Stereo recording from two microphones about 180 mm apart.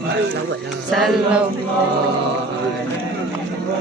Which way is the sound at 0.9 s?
Centre (ahead or behind).